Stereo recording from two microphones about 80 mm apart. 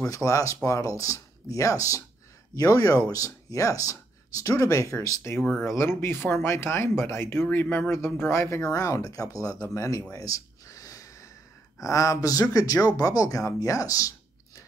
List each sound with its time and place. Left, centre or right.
0.1 s speech: left
8.7 s speech: left
10.1 s a sound: left
11.8 s speech: left